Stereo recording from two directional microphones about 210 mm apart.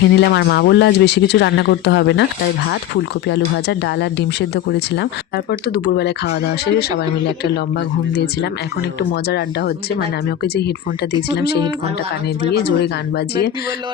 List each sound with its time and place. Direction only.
0.0 s speech: 55° left (ahead or behind)
8.1 s speech: 50° left (ahead or behind)